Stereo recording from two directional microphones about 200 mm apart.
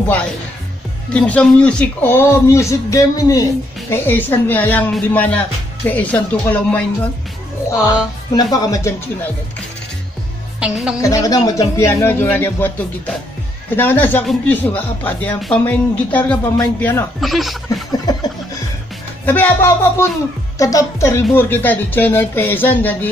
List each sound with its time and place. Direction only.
1.1 s speech: 5° left (ahead or behind)
7.8 s speech: 20° left (ahead or behind)
10.6 s a woman's voice: 5° right (ahead or behind)
11.0 s speech: 15° left (ahead or behind); by 17.6 s centre (ahead or behind)
19.2 s speech: 10° left (ahead or behind)